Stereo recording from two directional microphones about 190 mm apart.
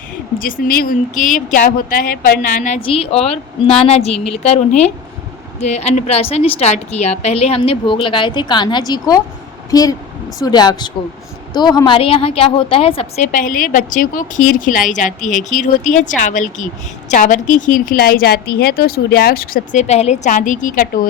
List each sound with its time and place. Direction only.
0.3 s a woman's voice: 45° left (ahead or behind)
2.8 s a woman's voice: 30° left (ahead or behind)
4.1 s a woman's voice: 5° left (ahead or behind)
4.4 s a woman's voice: 35° left (ahead or behind)